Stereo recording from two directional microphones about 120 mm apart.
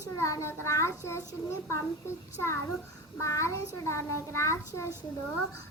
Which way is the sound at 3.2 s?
25° left (ahead or behind).